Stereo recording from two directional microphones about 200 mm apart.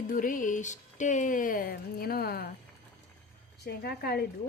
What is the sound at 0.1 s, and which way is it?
Speech, 45° left (ahead or behind).